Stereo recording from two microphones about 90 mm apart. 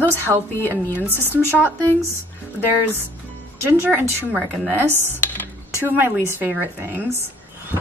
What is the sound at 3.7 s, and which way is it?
Speech, 25° right (ahead or behind).